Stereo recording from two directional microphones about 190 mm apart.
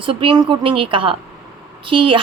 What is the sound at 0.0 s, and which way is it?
A woman's voice, 25° right (ahead or behind).